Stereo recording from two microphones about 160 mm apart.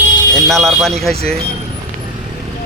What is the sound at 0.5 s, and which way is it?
Speech, centre (ahead or behind).